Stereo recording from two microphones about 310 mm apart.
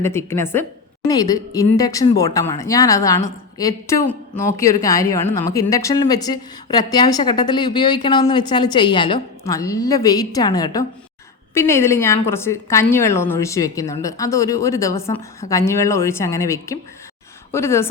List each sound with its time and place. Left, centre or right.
0.0 s a woman's voice: centre